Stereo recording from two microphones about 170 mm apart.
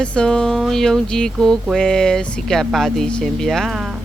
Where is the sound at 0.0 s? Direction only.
5° left (ahead or behind).